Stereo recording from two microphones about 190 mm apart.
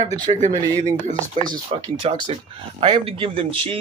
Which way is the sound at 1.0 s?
40° right (ahead or behind).